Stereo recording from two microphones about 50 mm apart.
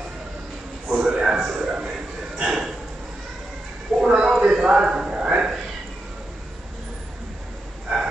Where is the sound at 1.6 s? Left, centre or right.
Centre.